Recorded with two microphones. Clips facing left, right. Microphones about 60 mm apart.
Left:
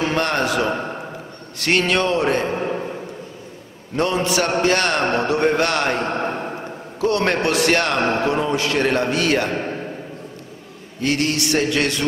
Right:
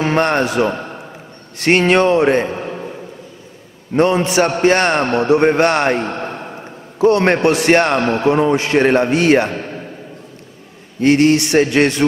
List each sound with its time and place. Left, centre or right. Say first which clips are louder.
0.0 s a man's voice: right 5 dB; right
2.5 s a sound: left 2 dB; centre
3.9 s a man's voice: right 6 dB; right
6.0 s a sound: left 1 dB; centre
7.0 s a man's voice: right 7 dB; right
9.5 s a man's voice: left 1 dB; centre
11.0 s a man's voice: right 9 dB; right